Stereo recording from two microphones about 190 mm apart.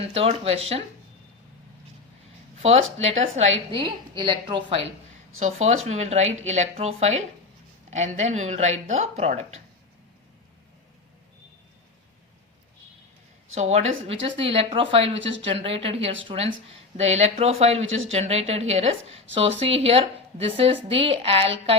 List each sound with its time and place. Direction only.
0.1 s a woman's voice: 35° right (ahead or behind)
2.6 s a woman's voice: 35° right (ahead or behind)
5.9 s a woman's voice: 35° right (ahead or behind)
13.5 s a woman's voice: 35° right (ahead or behind)
15.2 s speech: 75° right (ahead or behind)
15.4 s a woman's voice: 30° right (ahead or behind)
17.8 s speech: 90° right
18.1 s a woman's voice: 35° right (ahead or behind)